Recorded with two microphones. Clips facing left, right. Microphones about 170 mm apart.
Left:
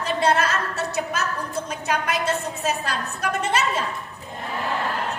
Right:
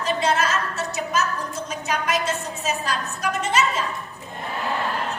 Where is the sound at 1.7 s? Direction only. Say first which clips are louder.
Right 2 dB; 55° left (ahead or behind).